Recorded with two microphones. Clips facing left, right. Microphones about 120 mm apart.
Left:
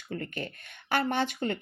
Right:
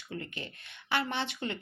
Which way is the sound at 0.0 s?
50° left (ahead or behind).